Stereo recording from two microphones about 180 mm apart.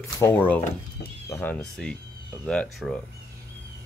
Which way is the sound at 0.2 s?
10° left (ahead or behind).